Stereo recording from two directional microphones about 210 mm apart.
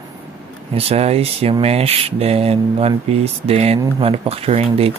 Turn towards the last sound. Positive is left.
turn(degrees=-30)  # may be behind; listen again after turning